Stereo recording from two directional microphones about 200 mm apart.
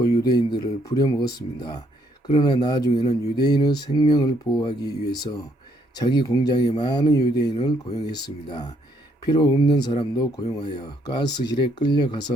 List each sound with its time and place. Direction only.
0.0 s speech: 20° left (ahead or behind)